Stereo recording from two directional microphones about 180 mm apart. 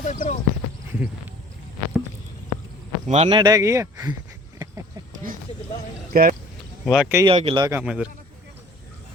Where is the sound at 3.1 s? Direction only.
30° right (ahead or behind); by 4.1 s 15° right (ahead or behind).